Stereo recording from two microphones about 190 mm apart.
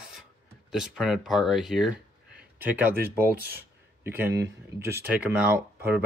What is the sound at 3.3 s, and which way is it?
Speech, 50° right (ahead or behind).